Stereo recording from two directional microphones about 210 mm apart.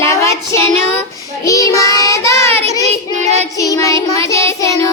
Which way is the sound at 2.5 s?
30° right (ahead or behind).